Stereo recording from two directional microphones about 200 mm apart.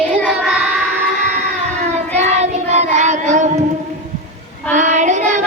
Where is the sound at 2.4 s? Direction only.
35° right (ahead or behind).